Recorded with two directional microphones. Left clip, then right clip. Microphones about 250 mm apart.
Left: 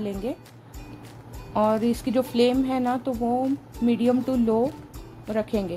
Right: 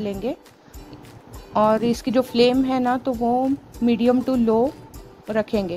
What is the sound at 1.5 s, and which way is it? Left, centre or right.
A woman's voice, centre.